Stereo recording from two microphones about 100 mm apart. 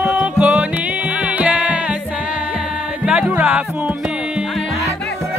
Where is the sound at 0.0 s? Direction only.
10° right (ahead or behind).